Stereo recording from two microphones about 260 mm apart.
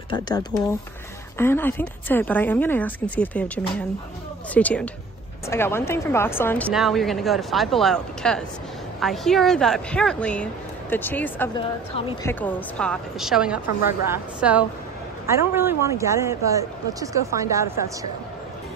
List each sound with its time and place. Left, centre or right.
0.1 s speech: centre
11.9 s a woman's voice: left
12.3 s speech: centre